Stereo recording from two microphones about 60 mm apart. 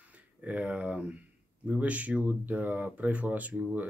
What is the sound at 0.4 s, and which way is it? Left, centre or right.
Speech, right.